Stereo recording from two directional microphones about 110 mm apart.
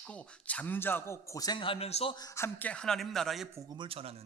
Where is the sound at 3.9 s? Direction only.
60° right (ahead or behind).